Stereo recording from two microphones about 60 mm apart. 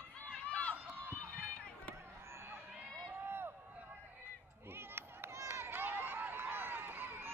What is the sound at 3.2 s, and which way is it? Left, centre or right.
Run, right.